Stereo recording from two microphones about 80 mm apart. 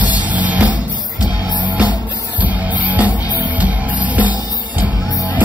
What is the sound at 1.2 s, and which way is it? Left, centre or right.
Music, left.